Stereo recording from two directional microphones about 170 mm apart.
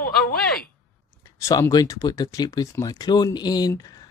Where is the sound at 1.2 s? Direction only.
20° left (ahead or behind).